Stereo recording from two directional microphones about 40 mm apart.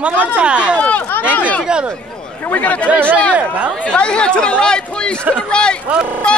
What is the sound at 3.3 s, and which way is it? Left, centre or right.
Speech, right.